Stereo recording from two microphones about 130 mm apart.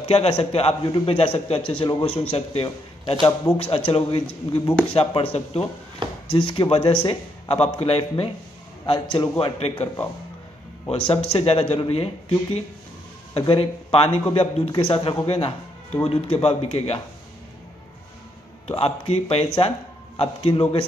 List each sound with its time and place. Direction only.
0.0 s a man's voice: 50° left (ahead or behind)
10.9 s a man's voice: 50° left (ahead or behind)
18.7 s a man's voice: 50° left (ahead or behind)